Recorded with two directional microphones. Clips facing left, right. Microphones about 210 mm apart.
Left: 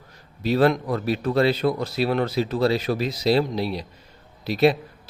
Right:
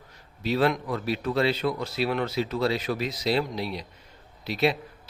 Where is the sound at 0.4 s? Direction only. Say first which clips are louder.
Left 5 dB; 40° left (ahead or behind).